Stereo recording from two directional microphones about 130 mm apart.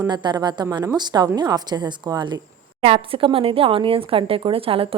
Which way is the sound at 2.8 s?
45° right (ahead or behind).